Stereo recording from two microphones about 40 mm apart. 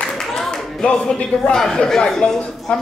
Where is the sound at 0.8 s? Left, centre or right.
Left.